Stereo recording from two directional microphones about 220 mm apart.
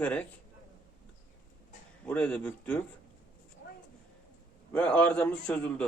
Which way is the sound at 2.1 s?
5° left (ahead or behind).